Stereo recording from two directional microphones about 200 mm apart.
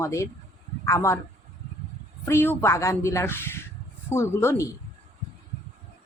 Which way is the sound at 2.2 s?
10° left (ahead or behind).